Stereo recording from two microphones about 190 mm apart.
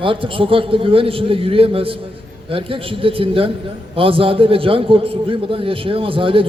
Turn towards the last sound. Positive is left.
turn(degrees=-30)  # may be behind; listen again after turning